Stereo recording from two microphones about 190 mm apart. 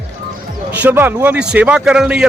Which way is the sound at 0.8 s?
10° right (ahead or behind).